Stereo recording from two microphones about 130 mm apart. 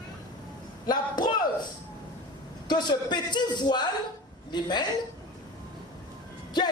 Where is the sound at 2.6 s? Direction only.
35° left (ahead or behind).